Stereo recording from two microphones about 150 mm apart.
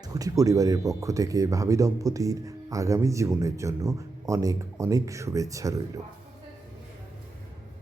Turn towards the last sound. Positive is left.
turn(degrees=-20)  # may be behind; listen again after turning